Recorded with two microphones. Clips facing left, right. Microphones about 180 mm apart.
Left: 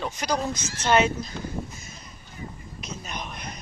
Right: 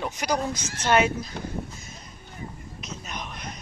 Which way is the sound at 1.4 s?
60° right (ahead or behind).